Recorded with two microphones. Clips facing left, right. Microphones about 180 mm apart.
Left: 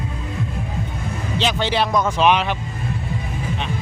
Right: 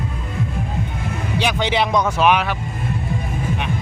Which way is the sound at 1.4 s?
15° right (ahead or behind).